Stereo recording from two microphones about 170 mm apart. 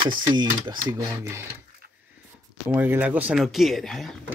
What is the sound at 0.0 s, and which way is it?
Speech, 25° right (ahead or behind).